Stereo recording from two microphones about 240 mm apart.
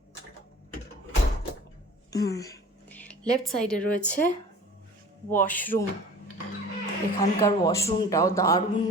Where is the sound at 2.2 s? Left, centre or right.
Centre.